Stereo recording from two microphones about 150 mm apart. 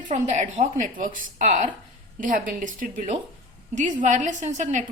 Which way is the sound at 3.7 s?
55° right (ahead or behind).